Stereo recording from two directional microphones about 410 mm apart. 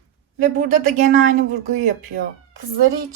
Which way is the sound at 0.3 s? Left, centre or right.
Centre.